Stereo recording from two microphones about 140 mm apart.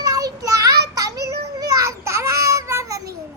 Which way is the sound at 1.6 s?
20° right (ahead or behind).